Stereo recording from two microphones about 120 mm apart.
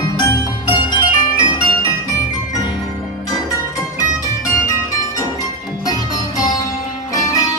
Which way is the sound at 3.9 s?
25° left (ahead or behind).